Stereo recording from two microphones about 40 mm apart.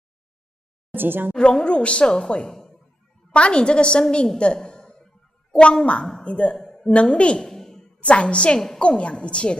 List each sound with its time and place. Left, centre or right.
0.9 s a woman's voice: right
1.3 s a woman's voice: centre
2.1 s a woman's voice: centre
3.3 s a woman's voice: left
4.6 s a sound: centre
5.6 s a woman's voice: left
6.5 s a sound: centre
6.9 s a woman's voice: left
7.4 s a sound: centre
8.0 s a woman's voice: left